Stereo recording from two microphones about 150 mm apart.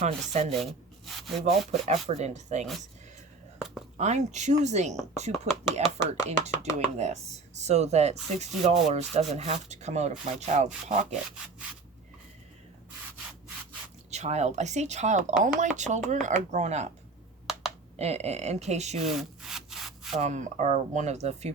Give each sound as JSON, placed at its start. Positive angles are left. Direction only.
{"t": 0.0, "sound": "speech", "side_deg": -45}
{"t": 0.6, "sound": "rub", "side_deg": 0}
{"t": 1.5, "sound": "speech", "side_deg": -45}
{"t": 3.9, "sound": "speech", "side_deg": -50}
{"t": 14.1, "sound": "speech", "side_deg": -50}
{"t": 17.9, "sound": "speech", "side_deg": -45}
{"t": 19.0, "sound": "wood", "side_deg": 0}
{"t": 20.1, "sound": "speech", "side_deg": -50}